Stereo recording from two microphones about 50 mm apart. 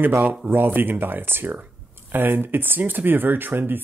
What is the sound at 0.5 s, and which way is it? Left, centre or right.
Speech, right.